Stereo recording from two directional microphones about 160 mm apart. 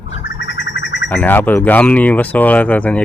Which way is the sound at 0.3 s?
90° left.